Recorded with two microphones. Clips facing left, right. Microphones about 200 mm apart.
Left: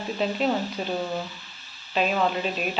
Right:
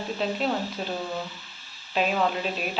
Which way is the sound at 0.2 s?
5° left (ahead or behind).